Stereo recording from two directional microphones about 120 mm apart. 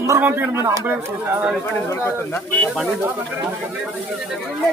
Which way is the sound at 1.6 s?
20° left (ahead or behind).